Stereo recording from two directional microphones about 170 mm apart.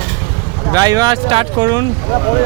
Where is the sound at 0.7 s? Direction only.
20° right (ahead or behind).